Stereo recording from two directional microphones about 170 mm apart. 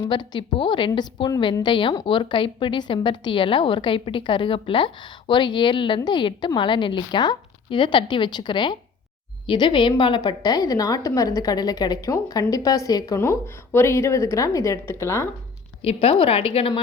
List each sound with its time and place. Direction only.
0.0 s a woman's voice: 25° left (ahead or behind)
15.8 s a woman's voice: 35° left (ahead or behind)